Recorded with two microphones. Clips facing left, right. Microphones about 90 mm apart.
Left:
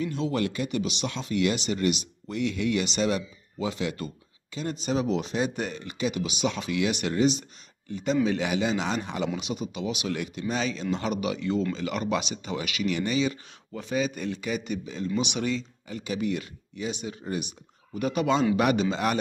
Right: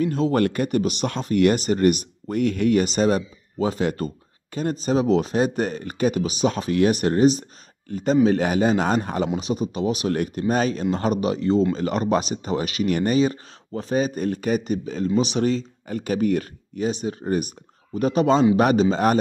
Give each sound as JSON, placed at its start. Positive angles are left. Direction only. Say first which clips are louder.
{"t": 0.0, "sound": "speech", "louder": "right 7 dB", "side_deg": -45}